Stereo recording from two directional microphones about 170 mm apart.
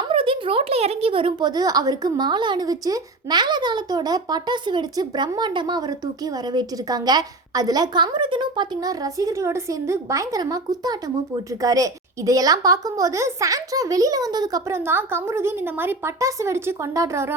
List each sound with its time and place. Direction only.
0.1 s a woman's voice: 30° right (ahead or behind); by 17.3 s 15° right (ahead or behind)